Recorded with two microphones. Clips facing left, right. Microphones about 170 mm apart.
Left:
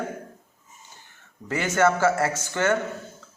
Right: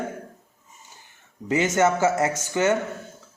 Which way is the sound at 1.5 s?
20° right (ahead or behind).